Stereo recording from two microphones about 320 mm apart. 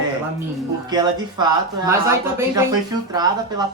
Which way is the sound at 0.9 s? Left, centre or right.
Centre.